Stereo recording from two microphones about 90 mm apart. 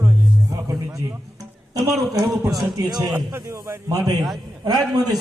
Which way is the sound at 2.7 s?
45° right (ahead or behind).